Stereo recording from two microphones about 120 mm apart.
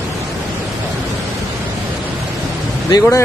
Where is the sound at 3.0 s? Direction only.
25° left (ahead or behind).